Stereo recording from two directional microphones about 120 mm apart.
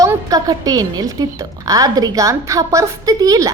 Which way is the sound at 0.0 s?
30° right (ahead or behind).